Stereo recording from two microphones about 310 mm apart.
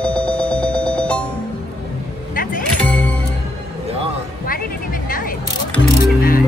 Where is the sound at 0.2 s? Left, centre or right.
Centre.